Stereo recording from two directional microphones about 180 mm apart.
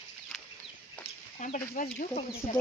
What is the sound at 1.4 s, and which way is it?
Speech, 45° left (ahead or behind).